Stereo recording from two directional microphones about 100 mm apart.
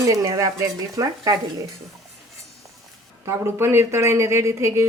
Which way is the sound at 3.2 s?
25° right (ahead or behind).